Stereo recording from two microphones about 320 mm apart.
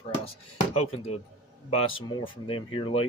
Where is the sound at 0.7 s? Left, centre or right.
Centre.